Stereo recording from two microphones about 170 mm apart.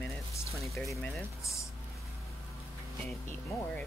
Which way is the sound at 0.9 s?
15° left (ahead or behind).